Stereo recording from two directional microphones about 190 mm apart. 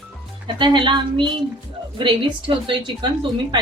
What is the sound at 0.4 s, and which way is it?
Speech, 25° right (ahead or behind).